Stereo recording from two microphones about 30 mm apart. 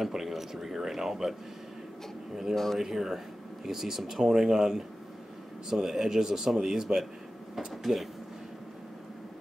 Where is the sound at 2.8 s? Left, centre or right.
Centre.